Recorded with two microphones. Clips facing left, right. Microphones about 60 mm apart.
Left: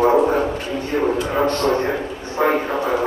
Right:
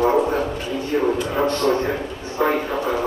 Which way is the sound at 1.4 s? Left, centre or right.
Left.